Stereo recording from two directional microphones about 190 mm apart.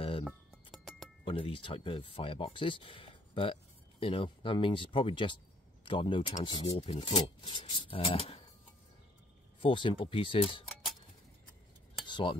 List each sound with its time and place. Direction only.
0.2 s music: centre (ahead or behind)
1.2 s speech: 25° left (ahead or behind)
9.6 s speech: 25° left (ahead or behind)
12.1 s cutlery: 25° left (ahead or behind)